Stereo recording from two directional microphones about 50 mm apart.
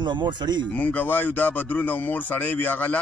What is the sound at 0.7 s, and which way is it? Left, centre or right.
Speech, left.